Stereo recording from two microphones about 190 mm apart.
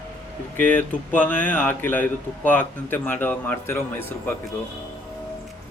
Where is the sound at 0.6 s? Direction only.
10° left (ahead or behind).